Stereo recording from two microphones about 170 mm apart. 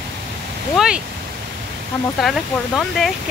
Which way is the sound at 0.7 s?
5° right (ahead or behind).